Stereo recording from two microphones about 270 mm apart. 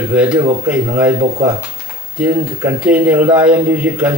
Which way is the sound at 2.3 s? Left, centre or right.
Centre.